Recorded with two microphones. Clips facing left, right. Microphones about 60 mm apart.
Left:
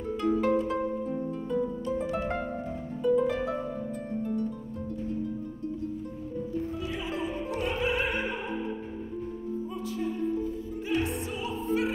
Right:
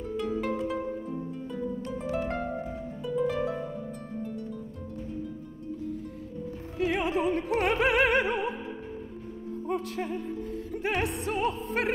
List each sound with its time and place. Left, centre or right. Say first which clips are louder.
0.2 s harp: left 5 dB; centre
3.2 s harp: left 1 dB; centre
6.8 s opera: right 6 dB; right
9.7 s music: right 6 dB; right